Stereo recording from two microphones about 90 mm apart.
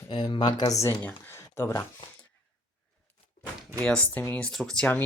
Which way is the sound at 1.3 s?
25° left (ahead or behind).